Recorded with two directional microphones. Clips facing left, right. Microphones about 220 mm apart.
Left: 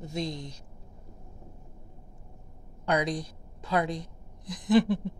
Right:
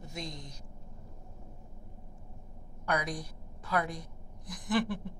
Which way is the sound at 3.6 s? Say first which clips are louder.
Left 4 dB; 20° left (ahead or behind).